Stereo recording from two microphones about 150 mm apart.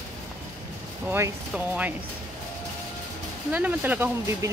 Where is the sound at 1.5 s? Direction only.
10° right (ahead or behind).